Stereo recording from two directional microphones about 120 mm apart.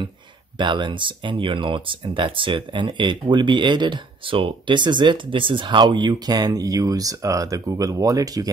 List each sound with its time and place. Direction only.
0.6 s speech: 40° right (ahead or behind)